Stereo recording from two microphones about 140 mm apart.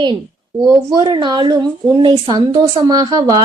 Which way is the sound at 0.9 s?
35° right (ahead or behind).